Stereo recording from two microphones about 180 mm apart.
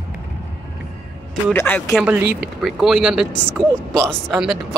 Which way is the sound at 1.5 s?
10° left (ahead or behind).